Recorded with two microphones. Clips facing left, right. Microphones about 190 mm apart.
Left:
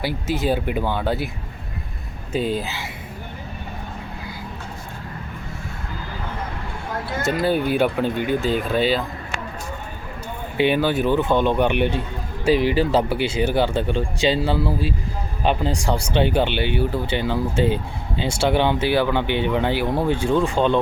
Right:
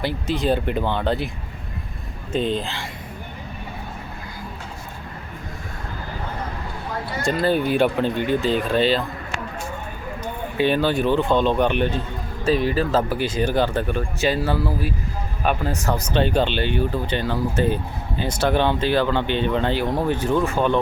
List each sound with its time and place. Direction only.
0.0 s speech: 5° left (ahead or behind)
2.3 s speech: 5° left (ahead or behind)
7.3 s speech: 5° left (ahead or behind)
10.6 s speech: 15° left (ahead or behind)
12.5 s a man's voice: 90° left
12.9 s speech: 15° left (ahead or behind)
15.7 s speech: 10° left (ahead or behind)